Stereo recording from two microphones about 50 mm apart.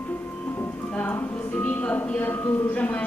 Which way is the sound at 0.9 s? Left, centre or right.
Left.